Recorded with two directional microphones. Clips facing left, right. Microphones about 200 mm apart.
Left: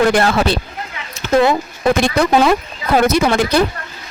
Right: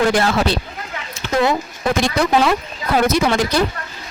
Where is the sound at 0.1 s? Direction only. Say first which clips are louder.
Left 2 dB; 55° left (ahead or behind).